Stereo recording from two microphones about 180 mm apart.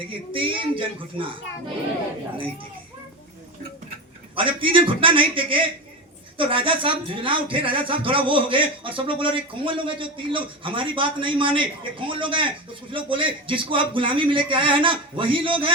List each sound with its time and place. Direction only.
0.1 s speech: 30° right (ahead or behind)
4.4 s speech: 30° right (ahead or behind)